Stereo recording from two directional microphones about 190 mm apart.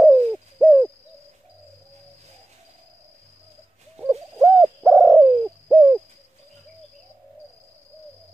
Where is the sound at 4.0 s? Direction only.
5° right (ahead or behind).